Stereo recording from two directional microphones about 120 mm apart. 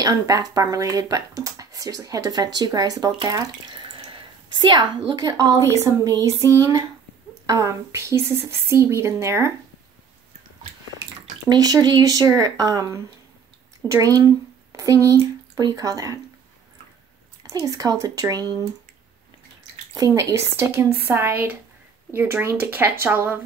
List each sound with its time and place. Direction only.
0.0 s speech: 30° right (ahead or behind)
11.4 s speech: 30° right (ahead or behind)
17.5 s speech: 30° right (ahead or behind)
20.0 s speech: 30° right (ahead or behind)